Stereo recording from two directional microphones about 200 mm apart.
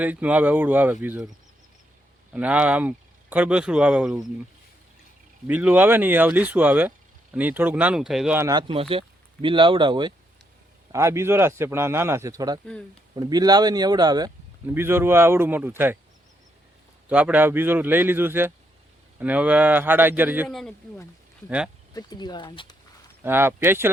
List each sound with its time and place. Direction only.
0.0 s speech: 5° right (ahead or behind)
2.3 s speech: 5° right (ahead or behind)
5.5 s speech: 10° right (ahead or behind)
8.4 s speech: 20° right (ahead or behind)
17.1 s speech: 5° right (ahead or behind)
20.5 s speech: centre (ahead or behind)
21.9 s speech: 20° left (ahead or behind)
23.2 s speech: 10° right (ahead or behind)